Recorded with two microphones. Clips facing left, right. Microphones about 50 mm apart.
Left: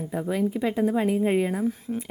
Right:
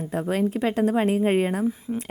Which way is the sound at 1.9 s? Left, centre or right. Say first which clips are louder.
Right 1 dB; right.